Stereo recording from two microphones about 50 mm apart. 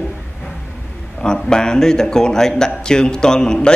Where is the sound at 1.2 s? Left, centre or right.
Centre.